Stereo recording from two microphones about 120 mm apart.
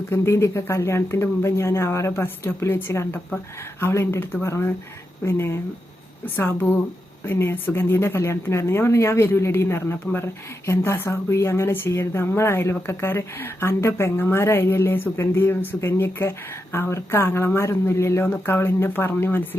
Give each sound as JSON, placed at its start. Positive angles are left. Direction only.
{"t": 0.1, "sound": "a woman's voice", "side_deg": 20}